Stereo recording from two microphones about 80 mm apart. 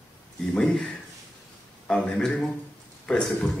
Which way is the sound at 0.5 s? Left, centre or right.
Centre.